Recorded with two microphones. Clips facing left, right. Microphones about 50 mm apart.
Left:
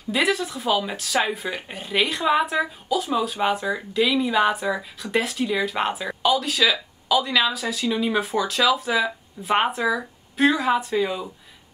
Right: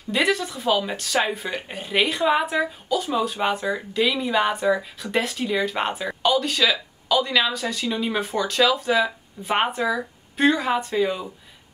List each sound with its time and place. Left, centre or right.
0.1 s speech: centre